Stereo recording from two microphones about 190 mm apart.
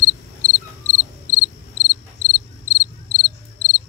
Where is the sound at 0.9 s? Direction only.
15° right (ahead or behind).